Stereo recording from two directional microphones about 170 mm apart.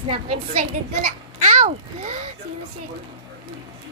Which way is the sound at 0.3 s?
35° right (ahead or behind).